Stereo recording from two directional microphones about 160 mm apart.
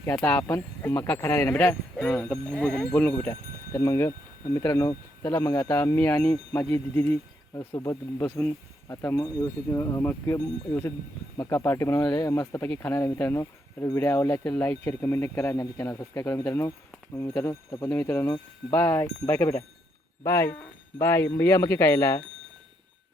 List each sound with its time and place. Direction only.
0.0 s speech: 10° left (ahead or behind)
12.6 s speech: 10° left (ahead or behind)